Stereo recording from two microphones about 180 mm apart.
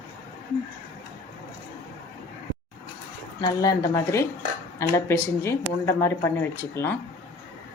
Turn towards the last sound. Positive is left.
turn(degrees=10)  # may be behind; listen again after turning